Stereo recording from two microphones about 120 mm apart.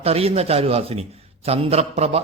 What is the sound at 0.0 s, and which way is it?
A man's voice, 55° right (ahead or behind).